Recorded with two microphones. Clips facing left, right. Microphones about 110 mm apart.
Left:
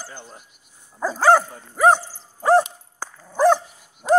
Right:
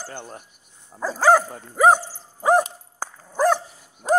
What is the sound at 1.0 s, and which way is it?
Dog, 5° right (ahead or behind).